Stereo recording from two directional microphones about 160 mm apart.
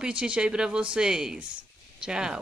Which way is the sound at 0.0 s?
5° right (ahead or behind).